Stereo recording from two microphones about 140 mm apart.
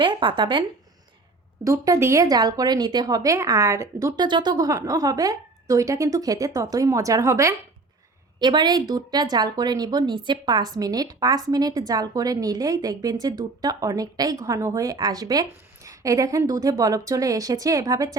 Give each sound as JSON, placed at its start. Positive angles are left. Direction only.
{"t": 0.0, "sound": "speech", "side_deg": -35}
{"t": 1.6, "sound": "speech", "side_deg": -25}
{"t": 4.3, "sound": "speech", "side_deg": -35}